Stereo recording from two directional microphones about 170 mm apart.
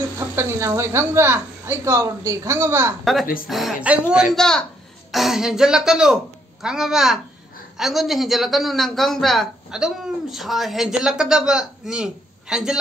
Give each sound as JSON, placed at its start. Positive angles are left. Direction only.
{"t": 0.4, "sound": "a woman's voice", "side_deg": -15}
{"t": 3.4, "sound": "a man's voice", "side_deg": 0}